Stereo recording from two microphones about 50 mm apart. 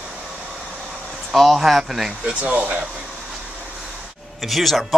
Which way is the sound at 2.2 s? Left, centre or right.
Right.